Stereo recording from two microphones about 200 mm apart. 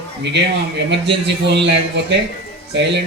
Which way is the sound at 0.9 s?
60° right (ahead or behind).